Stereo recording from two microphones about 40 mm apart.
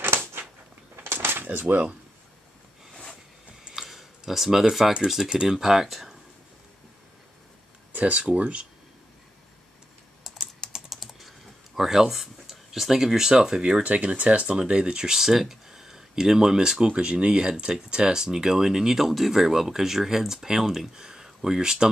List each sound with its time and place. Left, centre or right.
0.0 s a sound: right
0.9 s a sound: right
1.5 s speech: right
3.7 s a sound: centre
5.0 s speech: centre
8.0 s speech: right
10.9 s speech: centre; by 14.6 s right
14.6 s speech: right
16.9 s speech: right